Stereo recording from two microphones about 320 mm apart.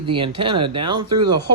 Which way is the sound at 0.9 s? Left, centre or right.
Right.